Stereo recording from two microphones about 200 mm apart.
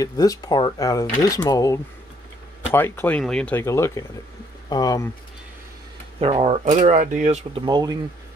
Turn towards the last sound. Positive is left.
turn(degrees=-20)  # may be behind; listen again after turning